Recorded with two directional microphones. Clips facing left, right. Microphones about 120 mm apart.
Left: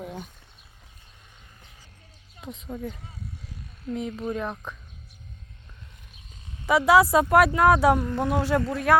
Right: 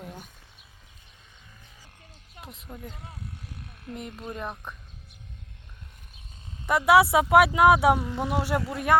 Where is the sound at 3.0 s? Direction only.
65° right (ahead or behind).